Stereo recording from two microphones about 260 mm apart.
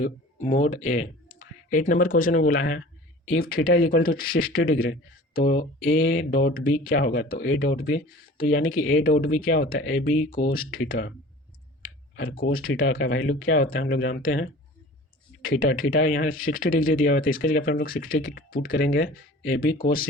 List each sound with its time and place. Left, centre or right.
0.0 s speech: left
8.8 s speech: left
9.0 s speech: left
11.8 s clicking: left
12.4 s speech: left
12.7 s speech: left
15.7 s speech: left